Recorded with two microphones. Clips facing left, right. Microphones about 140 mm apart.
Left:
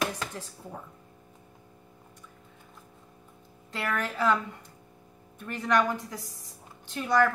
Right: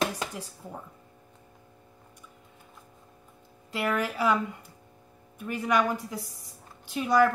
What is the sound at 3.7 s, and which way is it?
Speech, 10° right (ahead or behind).